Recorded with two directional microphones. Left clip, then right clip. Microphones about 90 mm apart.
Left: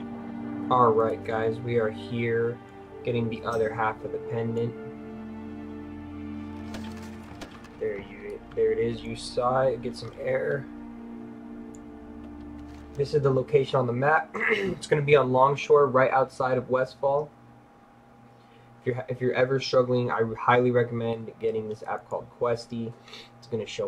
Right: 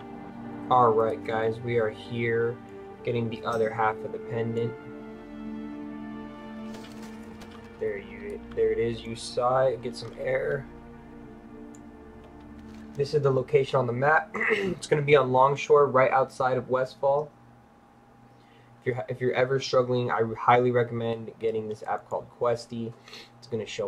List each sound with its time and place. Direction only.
0.7 s speech: 20° right (ahead or behind)
6.7 s music: centre (ahead or behind)
8.5 s speech: 15° right (ahead or behind)
13.0 s speech: 20° right (ahead or behind)
18.9 s speech: 20° right (ahead or behind)